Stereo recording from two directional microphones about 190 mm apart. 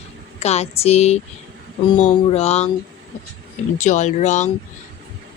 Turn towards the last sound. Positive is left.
turn(degrees=40)  # may be behind; listen again after turning